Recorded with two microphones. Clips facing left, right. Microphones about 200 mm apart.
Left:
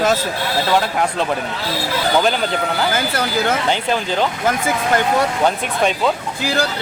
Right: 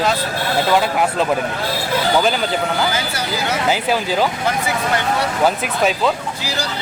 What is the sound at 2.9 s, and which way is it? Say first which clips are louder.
Speech: left 3 dB; 55° left (ahead or behind).